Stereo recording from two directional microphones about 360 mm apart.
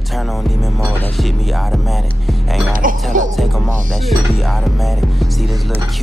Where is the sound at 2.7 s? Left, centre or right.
Right.